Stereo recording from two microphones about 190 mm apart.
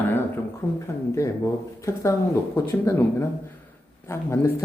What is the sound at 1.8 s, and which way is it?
Speech, 15° left (ahead or behind).